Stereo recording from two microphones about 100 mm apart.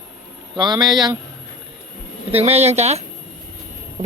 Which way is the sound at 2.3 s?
90° right.